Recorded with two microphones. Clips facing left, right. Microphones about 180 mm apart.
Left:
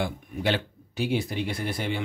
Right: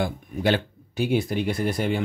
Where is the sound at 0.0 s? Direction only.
45° right (ahead or behind).